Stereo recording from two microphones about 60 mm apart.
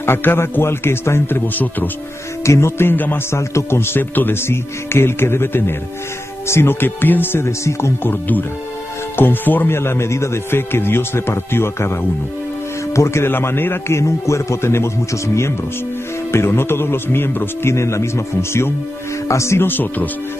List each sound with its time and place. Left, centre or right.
0.0 s speech: left
1.5 s speech: left
2.4 s music: left
2.8 s speech: left
3.3 s speech: left
7.4 s speech: left
9.8 s speech: left
13.9 s speech: left
17.7 s speech: left
19.7 s speech: left